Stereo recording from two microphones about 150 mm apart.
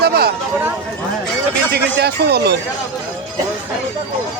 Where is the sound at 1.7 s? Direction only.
90° right.